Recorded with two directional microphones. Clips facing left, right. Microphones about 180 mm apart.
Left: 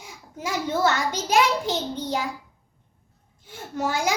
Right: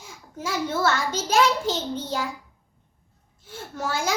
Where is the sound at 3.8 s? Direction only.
15° left (ahead or behind).